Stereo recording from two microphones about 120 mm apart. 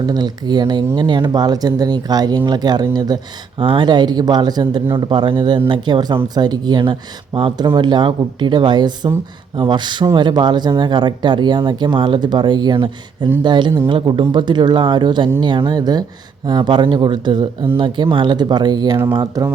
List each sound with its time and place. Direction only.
0.0 s speech: 35° right (ahead or behind)